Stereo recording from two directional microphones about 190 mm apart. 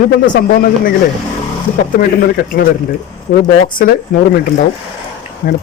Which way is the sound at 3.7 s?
50° left (ahead or behind).